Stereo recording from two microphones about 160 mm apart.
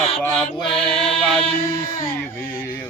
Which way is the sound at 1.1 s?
5° left (ahead or behind).